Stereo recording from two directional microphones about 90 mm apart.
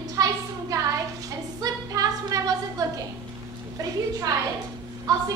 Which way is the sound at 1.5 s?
40° right (ahead or behind).